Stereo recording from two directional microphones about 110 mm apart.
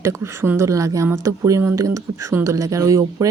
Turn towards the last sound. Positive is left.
turn(degrees=-30)  # may be behind; listen again after turning